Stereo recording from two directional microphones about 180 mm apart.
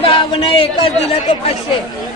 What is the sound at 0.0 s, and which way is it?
Speech, 30° left (ahead or behind).